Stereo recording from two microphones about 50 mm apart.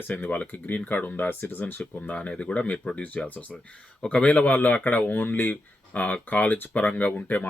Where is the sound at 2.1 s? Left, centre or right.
Left.